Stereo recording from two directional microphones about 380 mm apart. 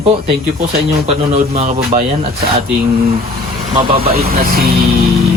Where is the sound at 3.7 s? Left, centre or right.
Centre.